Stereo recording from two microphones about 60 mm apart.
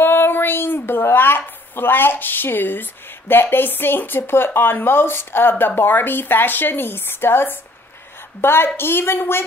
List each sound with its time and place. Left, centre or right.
0.0 s a woman's voice: left